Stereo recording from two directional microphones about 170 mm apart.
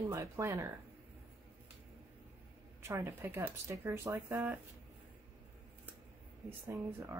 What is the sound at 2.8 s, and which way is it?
Speech, 15° right (ahead or behind).